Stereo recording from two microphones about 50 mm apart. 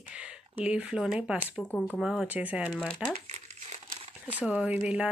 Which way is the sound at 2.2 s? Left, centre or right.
Right.